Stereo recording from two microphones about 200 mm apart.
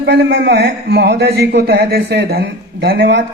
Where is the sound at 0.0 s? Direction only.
55° right (ahead or behind).